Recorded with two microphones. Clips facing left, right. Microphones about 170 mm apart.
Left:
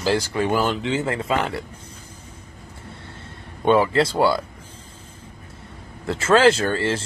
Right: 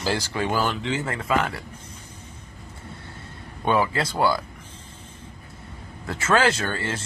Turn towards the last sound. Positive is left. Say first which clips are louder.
# left 6 dB
turn(degrees=25)  # may be behind; listen again after turning